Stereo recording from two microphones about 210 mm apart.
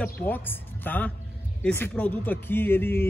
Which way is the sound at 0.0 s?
10° left (ahead or behind).